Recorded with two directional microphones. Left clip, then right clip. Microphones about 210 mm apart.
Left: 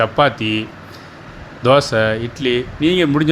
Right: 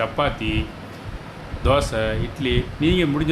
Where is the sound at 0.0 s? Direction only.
25° left (ahead or behind).